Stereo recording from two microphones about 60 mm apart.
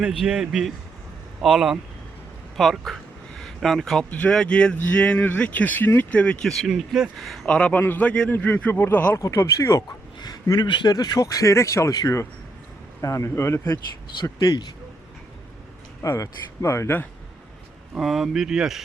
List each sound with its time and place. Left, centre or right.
0.0 s speech: centre
2.6 s a sound: centre
4.3 s speech: centre
5.4 s speech: left
6.0 s speech: left
6.4 s speech: centre
7.4 s speech: centre
7.8 s speech: left
9.1 s speech: left
10.4 s speech: left
16.0 s speech: left
16.6 s speech: left
18.0 s speech: centre